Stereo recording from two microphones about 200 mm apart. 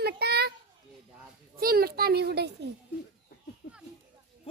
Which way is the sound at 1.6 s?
50° right (ahead or behind).